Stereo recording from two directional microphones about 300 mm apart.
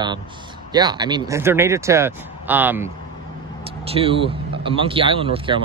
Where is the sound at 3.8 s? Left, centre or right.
Centre.